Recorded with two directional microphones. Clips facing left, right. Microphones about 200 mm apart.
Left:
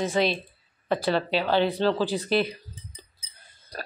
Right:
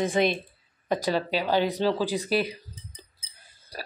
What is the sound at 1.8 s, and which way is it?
Cutlery, 10° right (ahead or behind).